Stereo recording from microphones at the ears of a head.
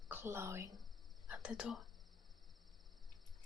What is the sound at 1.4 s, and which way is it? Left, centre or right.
Speech, left.